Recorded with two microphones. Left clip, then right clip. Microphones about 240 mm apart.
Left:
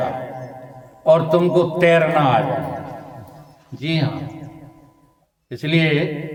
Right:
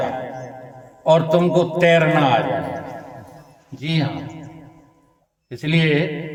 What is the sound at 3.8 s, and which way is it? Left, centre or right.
Speech, centre.